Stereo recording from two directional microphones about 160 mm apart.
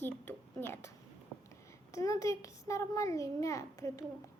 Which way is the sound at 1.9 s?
20° left (ahead or behind).